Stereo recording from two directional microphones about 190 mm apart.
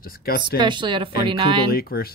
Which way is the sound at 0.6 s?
25° right (ahead or behind).